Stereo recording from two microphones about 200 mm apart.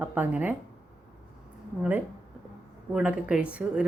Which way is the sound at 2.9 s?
5° right (ahead or behind).